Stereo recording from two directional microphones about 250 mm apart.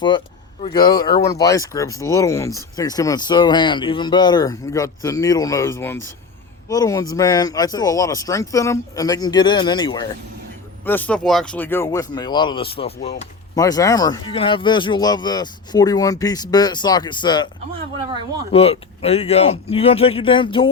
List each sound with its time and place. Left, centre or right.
0.6 s speech: centre
13.6 s speech: centre
18.5 s speech: left